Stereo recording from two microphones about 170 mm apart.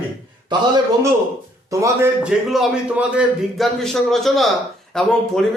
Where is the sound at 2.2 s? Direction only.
5° right (ahead or behind).